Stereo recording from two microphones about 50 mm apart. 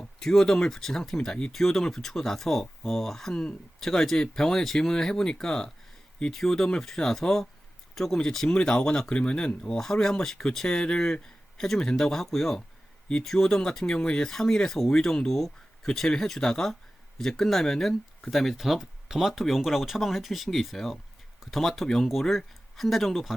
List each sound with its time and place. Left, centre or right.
0.0 s speech: centre
9.7 s speech: centre
10.8 s speech: centre